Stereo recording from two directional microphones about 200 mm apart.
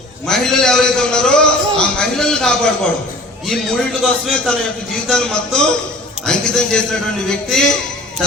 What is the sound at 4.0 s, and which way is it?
A man's voice, centre (ahead or behind).